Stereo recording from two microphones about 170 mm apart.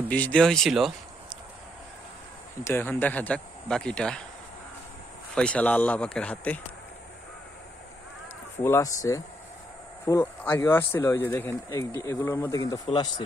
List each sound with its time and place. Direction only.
0.1 s speech: 10° left (ahead or behind)
2.6 s speech: 10° left (ahead or behind)
5.3 s speech: 5° left (ahead or behind)
8.6 s speech: 15° left (ahead or behind)